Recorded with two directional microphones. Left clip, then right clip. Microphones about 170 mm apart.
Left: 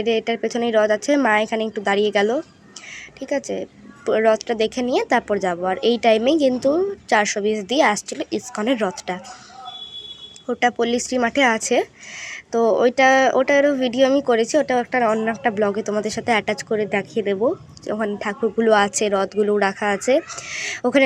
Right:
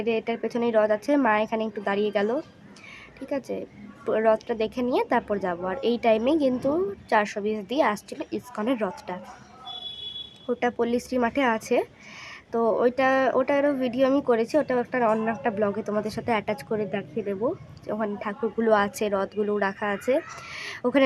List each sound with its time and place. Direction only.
0.0 s speech: 10° left (ahead or behind)
10.4 s speech: 5° left (ahead or behind)
16.9 s speech: 20° left (ahead or behind)
17.2 s speech: 10° left (ahead or behind)